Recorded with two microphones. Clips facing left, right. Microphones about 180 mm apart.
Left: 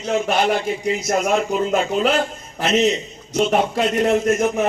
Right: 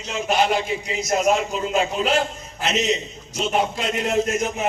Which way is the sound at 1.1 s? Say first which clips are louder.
Even; 55° left (ahead or behind).